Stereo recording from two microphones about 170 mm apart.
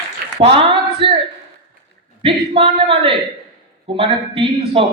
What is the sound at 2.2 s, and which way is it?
Speech, 35° right (ahead or behind).